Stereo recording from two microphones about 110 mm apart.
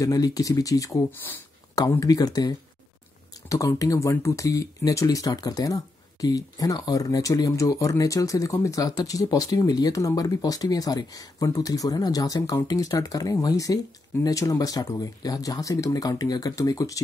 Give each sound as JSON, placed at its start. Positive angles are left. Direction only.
{"t": 0.0, "sound": "speech", "side_deg": 35}